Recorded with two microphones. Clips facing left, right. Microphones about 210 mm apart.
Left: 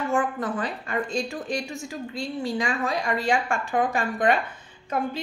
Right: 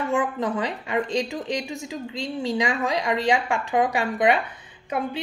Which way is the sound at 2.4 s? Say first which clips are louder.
Right 3 dB; 20° right (ahead or behind).